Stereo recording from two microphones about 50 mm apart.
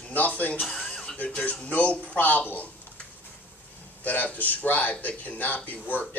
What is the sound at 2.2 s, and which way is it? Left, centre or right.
Speech, left.